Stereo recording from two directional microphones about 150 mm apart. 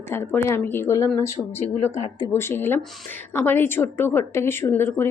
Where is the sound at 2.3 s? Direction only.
15° left (ahead or behind).